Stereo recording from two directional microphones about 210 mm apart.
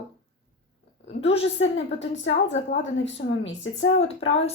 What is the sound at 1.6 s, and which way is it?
A woman's voice, 70° left (ahead or behind).